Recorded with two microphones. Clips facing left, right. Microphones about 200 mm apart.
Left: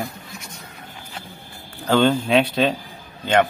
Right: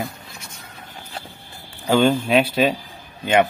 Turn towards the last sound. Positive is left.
turn(degrees=-15)  # may be behind; listen again after turning